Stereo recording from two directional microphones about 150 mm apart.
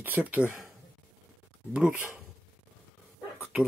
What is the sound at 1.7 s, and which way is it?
Speech, 10° right (ahead or behind).